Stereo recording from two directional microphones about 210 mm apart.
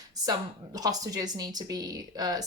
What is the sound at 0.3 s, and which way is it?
Speech, 15° right (ahead or behind).